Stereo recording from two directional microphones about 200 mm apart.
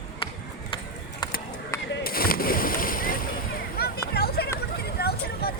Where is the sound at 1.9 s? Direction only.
50° left (ahead or behind).